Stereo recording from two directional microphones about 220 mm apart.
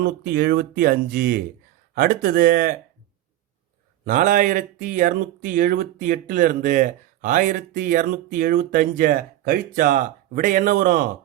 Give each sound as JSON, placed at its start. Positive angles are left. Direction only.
{"t": 0.0, "sound": "speech", "side_deg": -40}
{"t": 4.0, "sound": "speech", "side_deg": -35}